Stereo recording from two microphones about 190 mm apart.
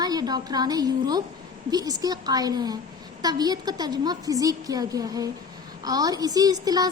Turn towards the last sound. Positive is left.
turn(degrees=-20)  # may be behind; listen again after turning